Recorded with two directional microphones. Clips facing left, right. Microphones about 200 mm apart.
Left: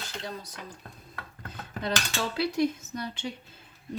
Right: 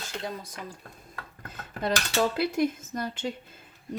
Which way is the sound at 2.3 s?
50° right (ahead or behind).